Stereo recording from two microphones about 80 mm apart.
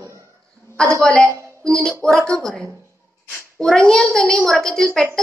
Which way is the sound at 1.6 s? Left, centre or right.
Centre.